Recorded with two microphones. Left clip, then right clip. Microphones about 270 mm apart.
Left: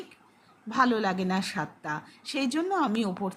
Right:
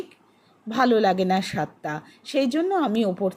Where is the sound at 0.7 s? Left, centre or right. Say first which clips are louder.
Right 6 dB; centre.